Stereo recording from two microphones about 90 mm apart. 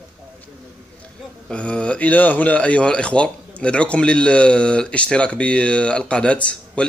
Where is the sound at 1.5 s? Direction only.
10° left (ahead or behind).